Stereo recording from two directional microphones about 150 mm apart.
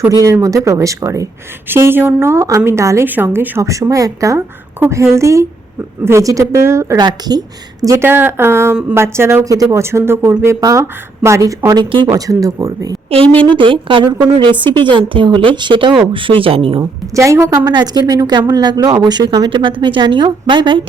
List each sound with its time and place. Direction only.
0.0 s a woman's voice: 20° right (ahead or behind)
12.1 s a woman's voice: 25° right (ahead or behind)
13.6 s a woman's voice: 35° right (ahead or behind)
17.2 s a woman's voice: 20° right (ahead or behind)